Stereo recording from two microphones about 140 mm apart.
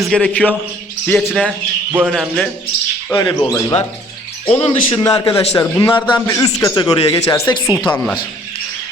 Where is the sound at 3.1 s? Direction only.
35° left (ahead or behind).